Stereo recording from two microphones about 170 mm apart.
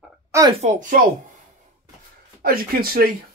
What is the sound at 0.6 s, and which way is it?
Speech, 45° right (ahead or behind).